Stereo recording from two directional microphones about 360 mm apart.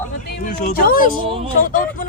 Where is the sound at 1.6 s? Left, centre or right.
Left.